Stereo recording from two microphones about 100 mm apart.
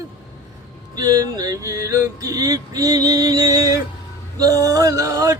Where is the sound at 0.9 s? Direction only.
40° right (ahead or behind).